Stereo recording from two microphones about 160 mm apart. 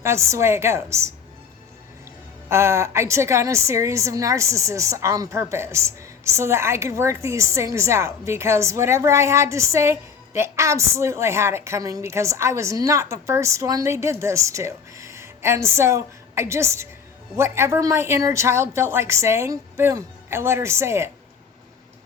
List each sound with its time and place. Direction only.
0.0 s a woman's voice: 15° right (ahead or behind)
2.5 s a woman's voice: 15° right (ahead or behind)